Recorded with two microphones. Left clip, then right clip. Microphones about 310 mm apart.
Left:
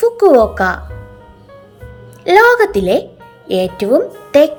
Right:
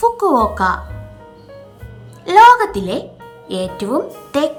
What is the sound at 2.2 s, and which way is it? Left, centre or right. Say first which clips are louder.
Speech: right 1 dB; centre.